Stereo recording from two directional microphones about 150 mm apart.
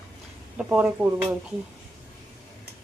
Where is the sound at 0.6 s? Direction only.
5° right (ahead or behind).